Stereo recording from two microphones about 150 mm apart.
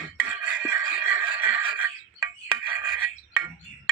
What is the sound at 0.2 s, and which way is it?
Music, 10° right (ahead or behind).